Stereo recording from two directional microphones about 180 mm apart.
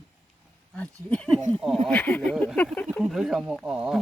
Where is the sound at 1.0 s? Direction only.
5° left (ahead or behind).